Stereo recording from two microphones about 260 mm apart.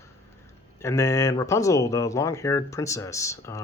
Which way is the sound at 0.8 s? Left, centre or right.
Centre.